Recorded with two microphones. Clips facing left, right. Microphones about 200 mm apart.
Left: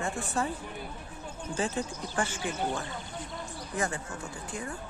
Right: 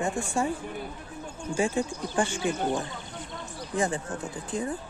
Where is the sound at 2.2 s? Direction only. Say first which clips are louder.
Right 5 dB; 30° right (ahead or behind).